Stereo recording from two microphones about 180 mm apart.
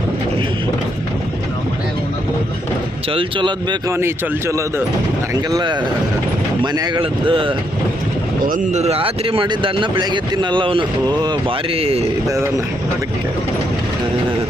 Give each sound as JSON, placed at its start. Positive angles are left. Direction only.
{"t": 3.1, "sound": "speech", "side_deg": -30}
{"t": 3.9, "sound": "speech", "side_deg": -15}
{"t": 8.4, "sound": "speech", "side_deg": -45}
{"t": 12.3, "sound": "speech", "side_deg": -15}